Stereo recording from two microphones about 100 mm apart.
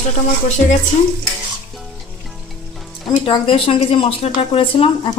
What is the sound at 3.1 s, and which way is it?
Speech, 55° left (ahead or behind).